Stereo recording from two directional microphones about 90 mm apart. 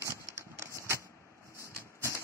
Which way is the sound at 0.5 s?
30° right (ahead or behind).